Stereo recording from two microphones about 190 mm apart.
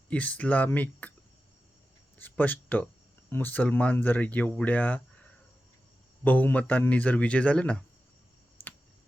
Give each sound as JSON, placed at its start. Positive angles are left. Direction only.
{"t": 0.1, "sound": "speech", "side_deg": 10}
{"t": 2.1, "sound": "speech", "side_deg": 10}
{"t": 6.2, "sound": "speech", "side_deg": 10}